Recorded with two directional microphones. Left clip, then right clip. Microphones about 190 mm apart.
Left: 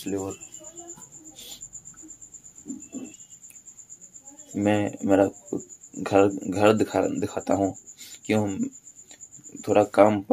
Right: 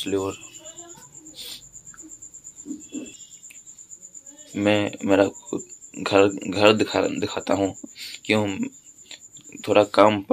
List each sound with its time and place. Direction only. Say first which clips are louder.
0.0 s speech: right 5 dB; 5° right (ahead or behind)
4.6 s speech: right 3 dB; 5° left (ahead or behind)
8.5 s a sound: right 2 dB; 5° left (ahead or behind)